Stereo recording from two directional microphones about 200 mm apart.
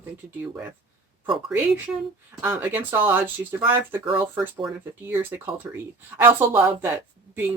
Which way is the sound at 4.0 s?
25° right (ahead or behind).